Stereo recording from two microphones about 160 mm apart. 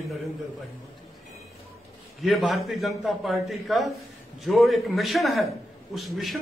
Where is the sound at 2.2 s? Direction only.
Centre (ahead or behind).